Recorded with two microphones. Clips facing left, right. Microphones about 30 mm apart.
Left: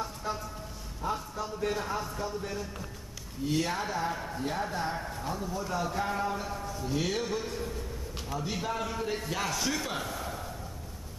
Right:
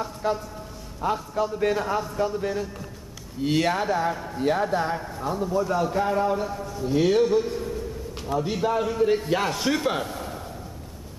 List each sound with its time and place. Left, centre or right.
0.2 s a man's voice: right
3.4 s speech: right
3.7 s speech: right
4.1 s a man's voice: centre
4.4 s a man's voice: right
4.9 s a man's voice: centre
5.3 s speech: right
5.6 s a man's voice: centre
6.8 s a man's voice: centre
9.3 s speech: right
10.2 s a sound: centre